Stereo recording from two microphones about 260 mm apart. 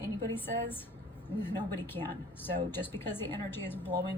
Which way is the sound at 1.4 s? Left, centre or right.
Centre.